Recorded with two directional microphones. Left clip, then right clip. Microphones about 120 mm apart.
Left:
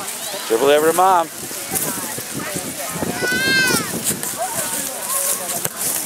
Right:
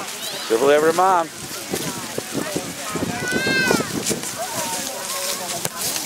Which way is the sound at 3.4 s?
45° left (ahead or behind).